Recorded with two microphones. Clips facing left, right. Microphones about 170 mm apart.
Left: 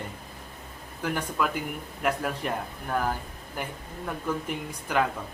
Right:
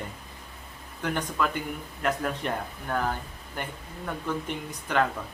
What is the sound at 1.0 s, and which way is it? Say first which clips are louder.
Speech: even; 5° left (ahead or behind).